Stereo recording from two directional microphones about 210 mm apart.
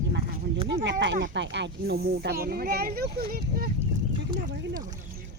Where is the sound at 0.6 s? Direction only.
60° right (ahead or behind).